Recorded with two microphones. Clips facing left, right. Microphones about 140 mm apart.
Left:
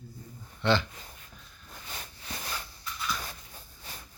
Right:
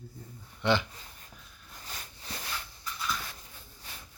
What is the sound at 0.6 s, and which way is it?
Speech, 15° right (ahead or behind).